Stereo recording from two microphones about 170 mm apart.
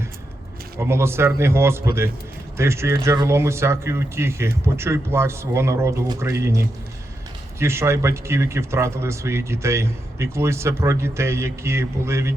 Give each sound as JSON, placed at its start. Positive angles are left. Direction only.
{"t": 0.8, "sound": "speech", "side_deg": -15}